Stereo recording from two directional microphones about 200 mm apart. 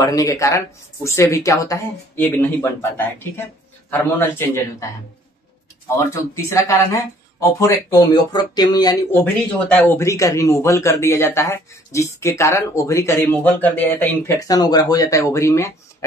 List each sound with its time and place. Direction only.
0.0 s a man's voice: 15° left (ahead or behind)
5.9 s speech: 15° left (ahead or behind)
9.2 s a man's voice: 10° left (ahead or behind)